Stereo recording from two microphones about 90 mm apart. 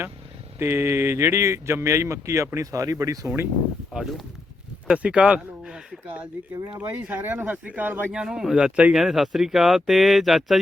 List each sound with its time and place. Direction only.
0.6 s speech: 30° right (ahead or behind)
3.9 s speech: 5° right (ahead or behind)
4.9 s a sound: 10° right (ahead or behind)
6.7 s speech: 15° right (ahead or behind)
8.1 s speech: 10° right (ahead or behind)